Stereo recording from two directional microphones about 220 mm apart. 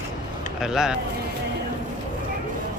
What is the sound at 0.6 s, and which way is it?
Speech, 5° right (ahead or behind).